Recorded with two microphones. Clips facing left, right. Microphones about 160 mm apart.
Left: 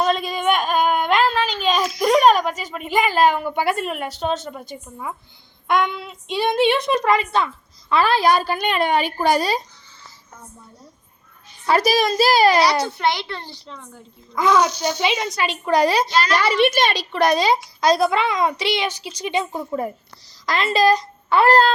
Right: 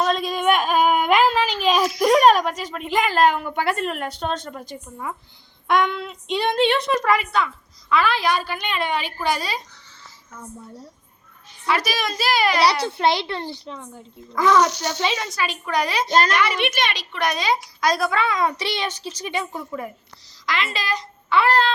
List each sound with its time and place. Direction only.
0.0 s a sound: centre (ahead or behind)
3.4 s a woman's voice: 15° left (ahead or behind); by 9.6 s 40° left (ahead or behind)
11.6 s a woman's voice: 35° left (ahead or behind)
12.8 s a child's voice: 30° right (ahead or behind)
14.3 s a woman's voice: 15° left (ahead or behind); by 16.0 s 35° left (ahead or behind)
16.0 s a woman's voice: 45° right (ahead or behind)
16.3 s a woman's voice: 35° left (ahead or behind)
20.4 s a woman's voice: 40° left (ahead or behind)